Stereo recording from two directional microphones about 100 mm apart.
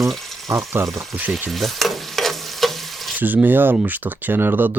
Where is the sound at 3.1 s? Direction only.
15° right (ahead or behind).